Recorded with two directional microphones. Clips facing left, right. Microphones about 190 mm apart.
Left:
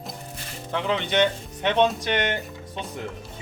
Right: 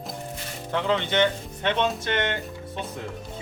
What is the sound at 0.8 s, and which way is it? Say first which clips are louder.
Speech: even; 15° left (ahead or behind).